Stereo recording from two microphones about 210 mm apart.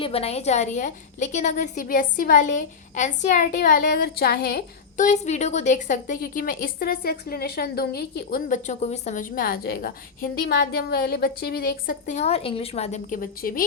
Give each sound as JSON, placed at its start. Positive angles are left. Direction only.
{"t": 0.0, "sound": "a woman's voice", "side_deg": 30}